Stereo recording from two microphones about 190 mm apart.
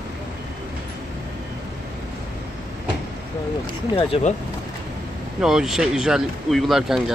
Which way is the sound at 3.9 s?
30° left (ahead or behind).